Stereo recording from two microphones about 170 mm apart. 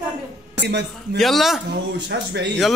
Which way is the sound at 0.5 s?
85° right.